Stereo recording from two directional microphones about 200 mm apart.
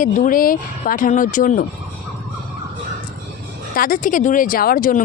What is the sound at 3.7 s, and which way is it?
Speech, 45° left (ahead or behind).